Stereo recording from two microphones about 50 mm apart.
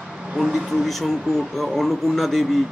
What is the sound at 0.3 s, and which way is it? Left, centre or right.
Speech, centre.